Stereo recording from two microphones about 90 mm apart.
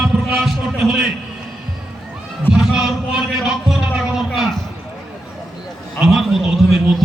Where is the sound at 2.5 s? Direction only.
5° right (ahead or behind).